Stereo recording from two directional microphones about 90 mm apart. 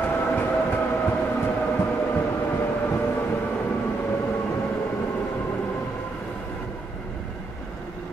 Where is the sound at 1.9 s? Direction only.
20° left (ahead or behind).